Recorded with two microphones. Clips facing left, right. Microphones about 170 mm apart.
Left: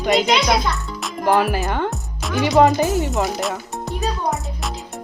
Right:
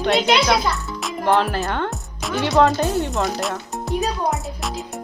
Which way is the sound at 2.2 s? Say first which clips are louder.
Right 1 dB; centre (ahead or behind).